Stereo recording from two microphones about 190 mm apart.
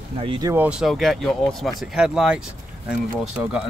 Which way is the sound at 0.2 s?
25° right (ahead or behind).